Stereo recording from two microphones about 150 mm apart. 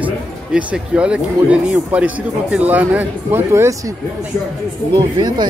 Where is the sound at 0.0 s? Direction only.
10° right (ahead or behind).